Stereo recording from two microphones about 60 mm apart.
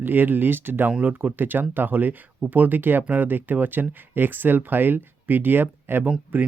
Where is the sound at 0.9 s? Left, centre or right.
Right.